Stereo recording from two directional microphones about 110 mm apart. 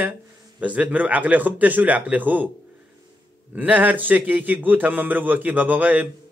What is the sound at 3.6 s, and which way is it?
Speech, 15° right (ahead or behind).